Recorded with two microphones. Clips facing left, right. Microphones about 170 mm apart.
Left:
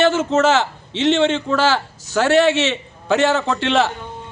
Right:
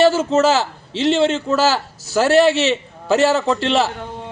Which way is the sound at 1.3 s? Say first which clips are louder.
Right 1 dB; 5° right (ahead or behind).